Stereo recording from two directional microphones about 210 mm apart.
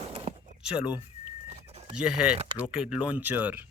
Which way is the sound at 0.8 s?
5° right (ahead or behind).